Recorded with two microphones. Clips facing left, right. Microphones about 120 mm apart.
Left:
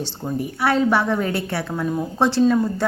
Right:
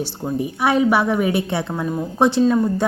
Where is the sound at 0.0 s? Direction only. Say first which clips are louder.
Right 3 dB; 20° right (ahead or behind).